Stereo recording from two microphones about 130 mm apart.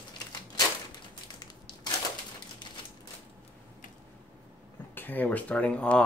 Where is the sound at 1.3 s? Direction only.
35° left (ahead or behind).